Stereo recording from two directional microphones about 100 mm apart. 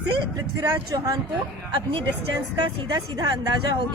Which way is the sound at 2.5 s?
45° right (ahead or behind).